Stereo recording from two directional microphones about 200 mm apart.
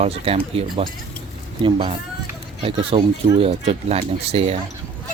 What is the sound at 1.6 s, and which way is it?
Speech, 25° right (ahead or behind).